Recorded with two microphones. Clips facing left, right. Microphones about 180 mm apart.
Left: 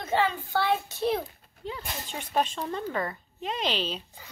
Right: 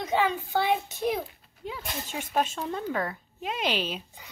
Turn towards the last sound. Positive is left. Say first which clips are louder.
# right 1 dB
turn(degrees=-10)  # may be behind; listen again after turning